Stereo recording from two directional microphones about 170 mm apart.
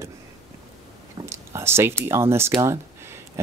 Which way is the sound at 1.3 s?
15° right (ahead or behind).